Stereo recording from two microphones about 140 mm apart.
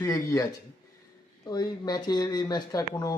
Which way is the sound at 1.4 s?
30° left (ahead or behind).